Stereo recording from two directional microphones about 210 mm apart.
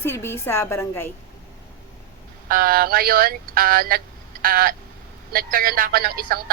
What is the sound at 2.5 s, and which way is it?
Speech, 45° right (ahead or behind).